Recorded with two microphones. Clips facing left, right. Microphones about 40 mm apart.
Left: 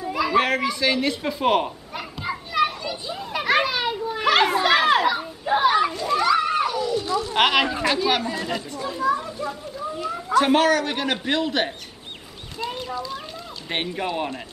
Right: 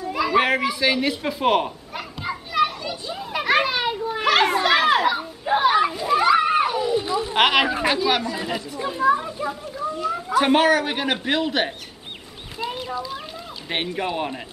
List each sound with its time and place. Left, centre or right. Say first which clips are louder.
0.0 s a sound: right 1 dB; centre; by 7.3 s right
7.3 s speech: right 2 dB; centre
8.0 s speech: right 1 dB; centre
8.7 s a child's voice: right 4 dB; right
9.9 s speech: right 4 dB; centre
10.3 s speech: even; centre
12.5 s clip-clop: right 1 dB; centre
13.7 s speech: right 1 dB; centre